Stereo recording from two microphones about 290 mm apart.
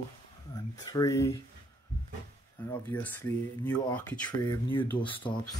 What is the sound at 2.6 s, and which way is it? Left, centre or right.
Speech, centre.